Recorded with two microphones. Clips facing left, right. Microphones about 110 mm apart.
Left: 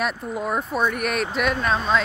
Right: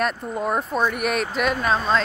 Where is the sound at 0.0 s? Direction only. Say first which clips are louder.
Right 2 dB; centre (ahead or behind).